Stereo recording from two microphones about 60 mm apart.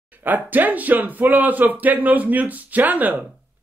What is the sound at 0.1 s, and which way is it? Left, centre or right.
Speech, right.